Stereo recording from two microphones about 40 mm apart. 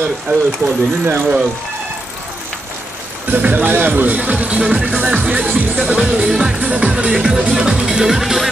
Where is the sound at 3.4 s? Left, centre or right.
Right.